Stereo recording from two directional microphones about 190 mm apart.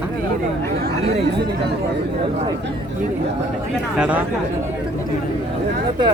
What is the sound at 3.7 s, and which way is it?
Speech, 5° right (ahead or behind).